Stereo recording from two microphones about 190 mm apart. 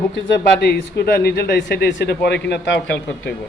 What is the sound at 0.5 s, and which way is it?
Speech, 55° left (ahead or behind).